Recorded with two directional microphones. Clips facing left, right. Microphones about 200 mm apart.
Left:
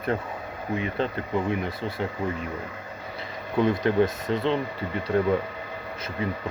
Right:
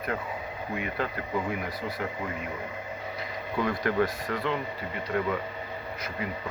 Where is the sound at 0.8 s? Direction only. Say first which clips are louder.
Left 4 dB; 25° left (ahead or behind).